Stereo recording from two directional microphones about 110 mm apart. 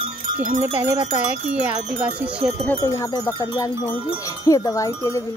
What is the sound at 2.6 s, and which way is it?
Wind chime, 25° left (ahead or behind).